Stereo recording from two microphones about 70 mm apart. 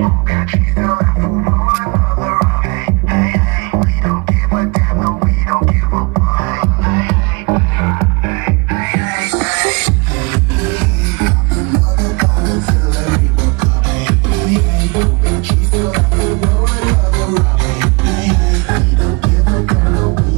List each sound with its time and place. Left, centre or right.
0.0 s music: centre
6.1 s music: centre
6.8 s music: centre
7.4 s music: centre
11.1 s music: centre